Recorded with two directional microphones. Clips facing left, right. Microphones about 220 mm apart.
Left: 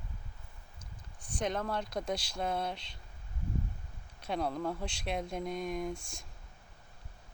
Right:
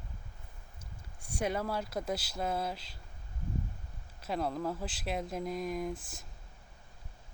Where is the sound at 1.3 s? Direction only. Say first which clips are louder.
Right 1 dB; 10° right (ahead or behind).